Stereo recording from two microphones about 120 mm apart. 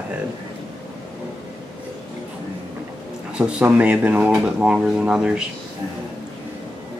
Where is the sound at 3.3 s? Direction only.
10° right (ahead or behind).